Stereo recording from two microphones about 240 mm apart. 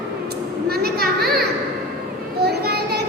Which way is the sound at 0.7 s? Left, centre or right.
Right.